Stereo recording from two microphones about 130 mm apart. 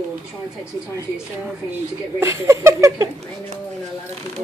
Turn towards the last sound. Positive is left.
turn(degrees=-25)  # may be behind; listen again after turning